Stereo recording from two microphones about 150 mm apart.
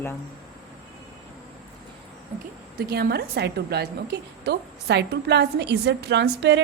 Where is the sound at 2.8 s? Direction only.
90° right.